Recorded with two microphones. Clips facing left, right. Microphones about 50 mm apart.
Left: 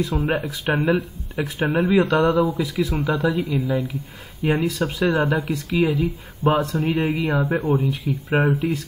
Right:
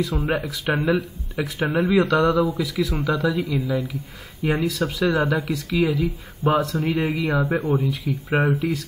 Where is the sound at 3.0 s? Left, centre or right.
Left.